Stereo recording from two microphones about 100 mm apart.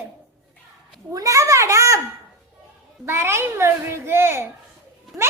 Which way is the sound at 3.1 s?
25° right (ahead or behind).